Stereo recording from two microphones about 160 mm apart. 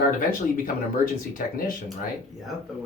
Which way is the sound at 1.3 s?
60° left (ahead or behind).